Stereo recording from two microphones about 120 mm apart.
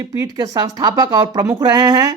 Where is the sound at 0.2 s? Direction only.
30° right (ahead or behind).